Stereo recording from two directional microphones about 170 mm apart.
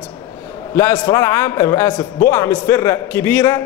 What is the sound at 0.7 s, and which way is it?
A man's voice, 15° left (ahead or behind).